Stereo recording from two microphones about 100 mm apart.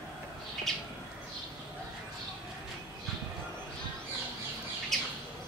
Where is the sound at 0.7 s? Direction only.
Centre (ahead or behind).